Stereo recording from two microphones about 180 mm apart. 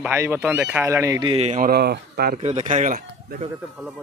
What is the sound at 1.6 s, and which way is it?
Speech, 60° right (ahead or behind).